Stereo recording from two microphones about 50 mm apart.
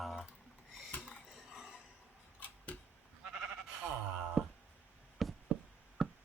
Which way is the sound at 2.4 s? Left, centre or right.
Left.